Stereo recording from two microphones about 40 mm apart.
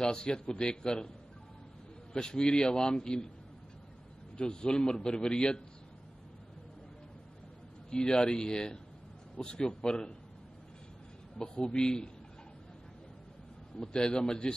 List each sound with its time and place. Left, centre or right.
0.0 s a man's voice: left
2.1 s a man's voice: centre
4.4 s a man's voice: centre
7.9 s a man's voice: left
11.5 s a man's voice: left
13.7 s a man's voice: left